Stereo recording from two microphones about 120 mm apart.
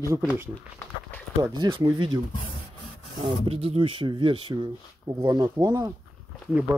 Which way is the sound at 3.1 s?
50° right (ahead or behind).